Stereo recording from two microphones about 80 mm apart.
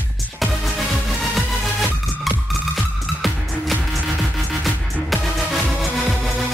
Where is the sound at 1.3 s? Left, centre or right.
Centre.